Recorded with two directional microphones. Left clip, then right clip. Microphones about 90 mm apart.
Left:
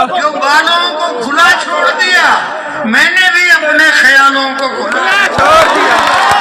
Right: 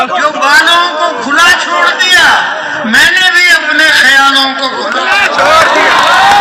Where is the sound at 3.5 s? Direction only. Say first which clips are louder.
Right 1 dB; 15° left (ahead or behind).